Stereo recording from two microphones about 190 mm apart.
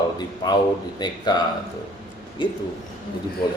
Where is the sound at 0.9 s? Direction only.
20° left (ahead or behind).